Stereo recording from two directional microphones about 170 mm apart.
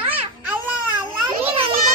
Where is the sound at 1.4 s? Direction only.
35° right (ahead or behind).